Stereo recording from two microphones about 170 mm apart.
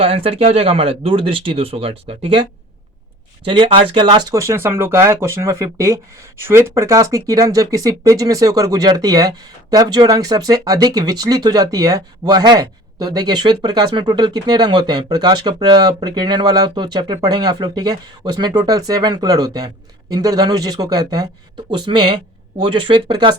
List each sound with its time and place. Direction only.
0.0 s speech: 35° right (ahead or behind)
3.6 s speech: 35° right (ahead or behind)